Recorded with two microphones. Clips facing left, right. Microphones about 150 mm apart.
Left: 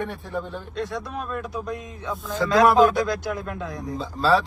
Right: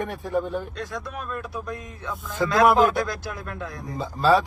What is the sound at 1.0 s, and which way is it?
Speech, 20° left (ahead or behind).